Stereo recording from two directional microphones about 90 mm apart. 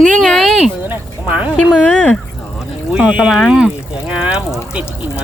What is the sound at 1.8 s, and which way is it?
Speech, 10° left (ahead or behind).